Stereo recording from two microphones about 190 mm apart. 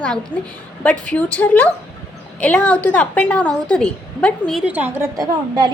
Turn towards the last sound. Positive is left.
turn(degrees=-20)  # may be behind; listen again after turning